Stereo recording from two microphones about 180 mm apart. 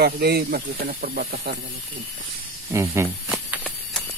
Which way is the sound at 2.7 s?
15° right (ahead or behind).